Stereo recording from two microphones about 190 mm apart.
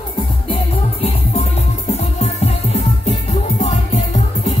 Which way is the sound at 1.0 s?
35° left (ahead or behind).